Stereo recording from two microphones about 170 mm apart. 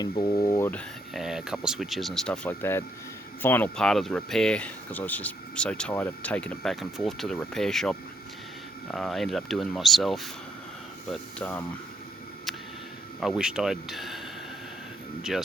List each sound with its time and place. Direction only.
0.0 s speech: 25° left (ahead or behind)
1.1 s speech: 5° right (ahead or behind)
13.1 s speech: centre (ahead or behind)
15.3 s speech: centre (ahead or behind)